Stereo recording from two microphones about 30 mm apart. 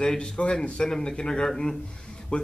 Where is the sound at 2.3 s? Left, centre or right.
Left.